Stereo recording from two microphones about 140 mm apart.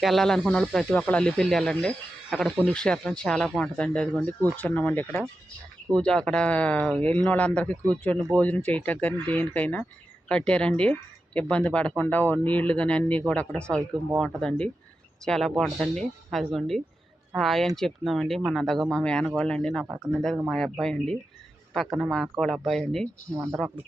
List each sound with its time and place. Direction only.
0.0 s speech: centre (ahead or behind)
19.8 s speech: 10° right (ahead or behind)
20.1 s speech: 5° left (ahead or behind)